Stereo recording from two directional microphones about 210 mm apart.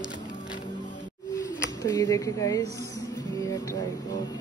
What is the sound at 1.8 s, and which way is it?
Speech, 15° left (ahead or behind).